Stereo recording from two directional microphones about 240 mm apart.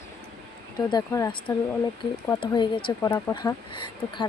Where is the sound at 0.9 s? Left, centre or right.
Centre.